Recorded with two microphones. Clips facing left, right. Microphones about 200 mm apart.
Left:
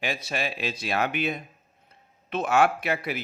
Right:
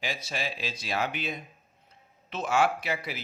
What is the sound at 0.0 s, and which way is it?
A man's voice, 60° left (ahead or behind).